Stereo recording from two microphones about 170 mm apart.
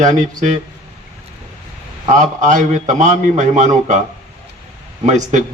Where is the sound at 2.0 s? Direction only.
45° right (ahead or behind).